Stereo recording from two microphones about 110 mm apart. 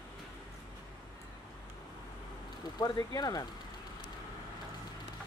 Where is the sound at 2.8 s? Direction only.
40° left (ahead or behind).